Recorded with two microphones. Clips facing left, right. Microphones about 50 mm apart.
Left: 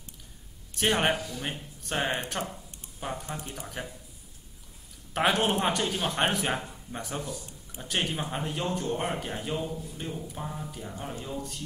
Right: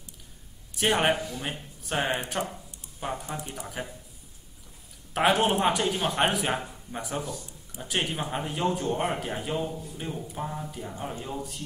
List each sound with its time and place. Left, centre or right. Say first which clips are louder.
0.8 s speech: right 2 dB; centre
1.1 s a man's voice: right 2 dB; right
1.4 s speech: right 1 dB; centre
5.1 s a man's voice: right 2 dB; centre
5.4 s speech: right 3 dB; centre
9.5 s a man's voice: right 2 dB; centre